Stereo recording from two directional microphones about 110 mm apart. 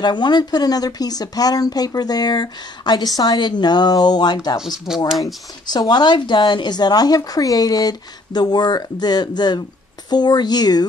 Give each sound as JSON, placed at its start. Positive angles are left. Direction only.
{"t": 0.0, "sound": "speech", "side_deg": 40}
{"t": 4.6, "sound": "speech", "side_deg": -5}
{"t": 5.2, "sound": "speech", "side_deg": 40}